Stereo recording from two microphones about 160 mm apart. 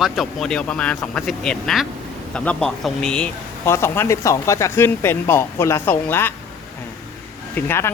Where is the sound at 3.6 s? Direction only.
15° left (ahead or behind).